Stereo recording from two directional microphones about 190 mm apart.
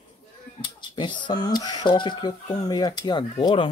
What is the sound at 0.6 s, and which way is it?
Speech, 25° left (ahead or behind).